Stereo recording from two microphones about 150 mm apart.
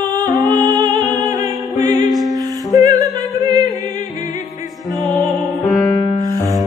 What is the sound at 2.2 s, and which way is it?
Music, 25° right (ahead or behind).